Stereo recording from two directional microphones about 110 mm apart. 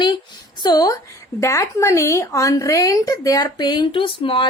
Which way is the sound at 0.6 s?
35° left (ahead or behind).